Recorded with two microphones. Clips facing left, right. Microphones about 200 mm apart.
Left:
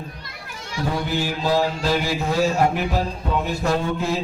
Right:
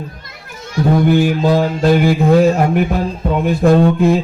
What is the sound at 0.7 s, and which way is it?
Music, 55° right (ahead or behind).